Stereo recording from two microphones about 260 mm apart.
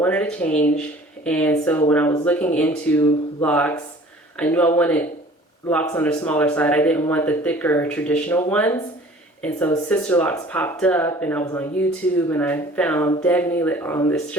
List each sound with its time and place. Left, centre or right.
0.0 s speech: centre